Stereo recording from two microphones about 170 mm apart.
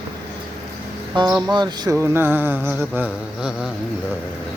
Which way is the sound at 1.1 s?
30° right (ahead or behind).